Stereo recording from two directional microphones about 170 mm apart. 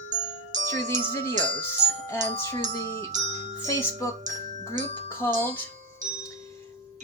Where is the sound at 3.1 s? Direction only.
45° right (ahead or behind).